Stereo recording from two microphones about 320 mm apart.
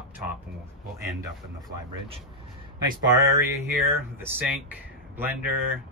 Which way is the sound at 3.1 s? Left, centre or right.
Centre.